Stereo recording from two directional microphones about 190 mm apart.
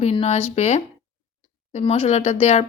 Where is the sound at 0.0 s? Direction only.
35° left (ahead or behind).